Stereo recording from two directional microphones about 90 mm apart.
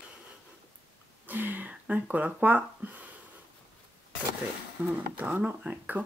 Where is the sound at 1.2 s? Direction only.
20° right (ahead or behind).